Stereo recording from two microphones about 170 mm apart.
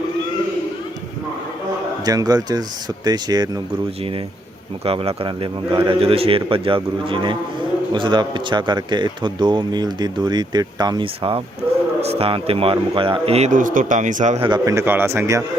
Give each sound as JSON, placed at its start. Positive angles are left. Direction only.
{"t": 2.0, "sound": "a man's voice", "side_deg": -20}
{"t": 4.9, "sound": "a man's voice", "side_deg": -35}
{"t": 14.4, "sound": "a man's voice", "side_deg": -25}